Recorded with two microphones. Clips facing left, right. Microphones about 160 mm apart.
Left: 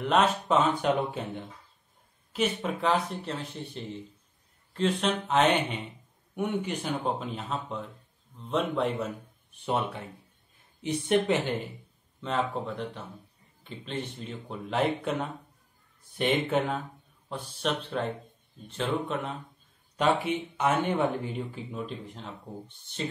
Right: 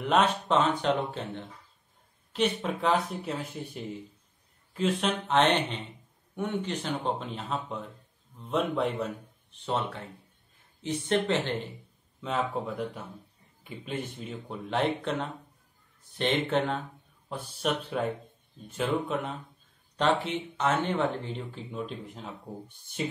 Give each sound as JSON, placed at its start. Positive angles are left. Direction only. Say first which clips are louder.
{"t": 0.0, "sound": "speech", "louder": "even", "side_deg": 0}
{"t": 9.5, "sound": "speech", "louder": "left 1 dB", "side_deg": 10}
{"t": 12.2, "sound": "speech", "louder": "left 1 dB", "side_deg": -5}
{"t": 20.0, "sound": "speech", "louder": "left 1 dB", "side_deg": 10}